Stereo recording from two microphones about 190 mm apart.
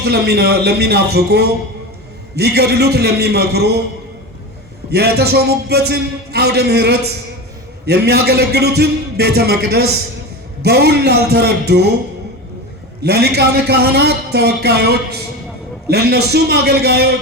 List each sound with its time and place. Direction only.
0.0 s a man's voice: 60° right (ahead or behind)
4.9 s a man's voice: 60° right (ahead or behind)
13.0 s a man's voice: 55° right (ahead or behind)